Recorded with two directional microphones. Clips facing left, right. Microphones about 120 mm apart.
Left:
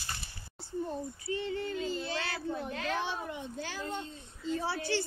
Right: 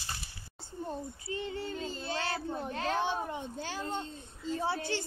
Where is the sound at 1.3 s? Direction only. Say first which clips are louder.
Left 3 dB; 25° right (ahead or behind).